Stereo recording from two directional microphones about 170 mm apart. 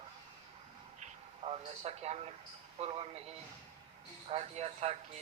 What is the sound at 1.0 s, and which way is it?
A man's voice, 35° right (ahead or behind).